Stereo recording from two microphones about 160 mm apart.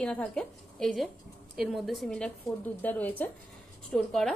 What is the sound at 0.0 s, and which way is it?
A woman's voice, 5° left (ahead or behind).